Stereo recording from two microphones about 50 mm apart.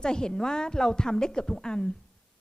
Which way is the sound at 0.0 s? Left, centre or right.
Centre.